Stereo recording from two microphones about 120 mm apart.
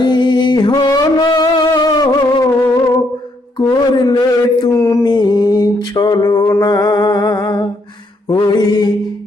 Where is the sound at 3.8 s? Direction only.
40° left (ahead or behind).